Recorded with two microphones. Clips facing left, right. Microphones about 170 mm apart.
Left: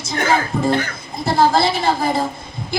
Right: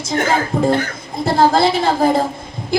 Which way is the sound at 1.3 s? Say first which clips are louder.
Right 2 dB; 50° right (ahead or behind).